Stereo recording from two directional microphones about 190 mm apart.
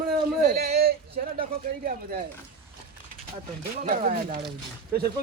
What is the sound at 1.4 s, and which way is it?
Speech, 45° right (ahead or behind).